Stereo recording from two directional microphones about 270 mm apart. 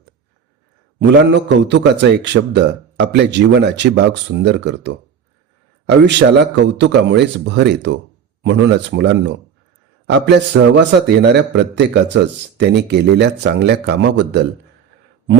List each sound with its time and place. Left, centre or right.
0.9 s a man's voice: right